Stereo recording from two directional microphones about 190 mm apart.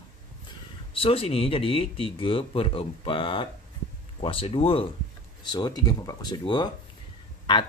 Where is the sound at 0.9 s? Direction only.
30° left (ahead or behind).